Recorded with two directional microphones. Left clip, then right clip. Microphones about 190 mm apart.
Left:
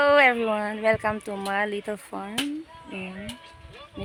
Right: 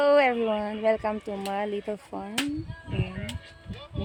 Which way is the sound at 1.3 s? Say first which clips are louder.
Left 2 dB; 25° left (ahead or behind).